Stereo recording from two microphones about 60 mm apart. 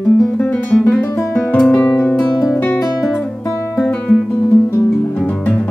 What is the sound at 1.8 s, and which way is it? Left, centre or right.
Music, left.